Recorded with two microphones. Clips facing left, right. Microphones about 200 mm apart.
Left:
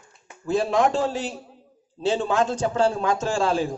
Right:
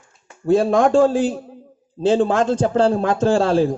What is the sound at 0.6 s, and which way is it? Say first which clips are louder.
Speech: right 6 dB; 50° right (ahead or behind).